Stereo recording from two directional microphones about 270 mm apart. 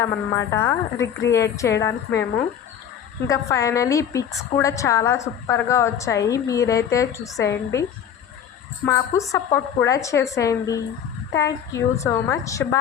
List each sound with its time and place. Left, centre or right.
0.0 s a woman's voice: centre
3.2 s a woman's voice: centre